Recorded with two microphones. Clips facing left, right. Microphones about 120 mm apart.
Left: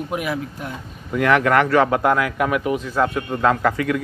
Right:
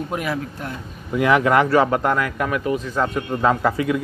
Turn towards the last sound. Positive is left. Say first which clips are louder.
# even
turn(degrees=-10)  # may be behind; listen again after turning